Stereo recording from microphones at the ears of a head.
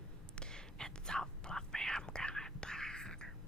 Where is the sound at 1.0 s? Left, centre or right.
Centre.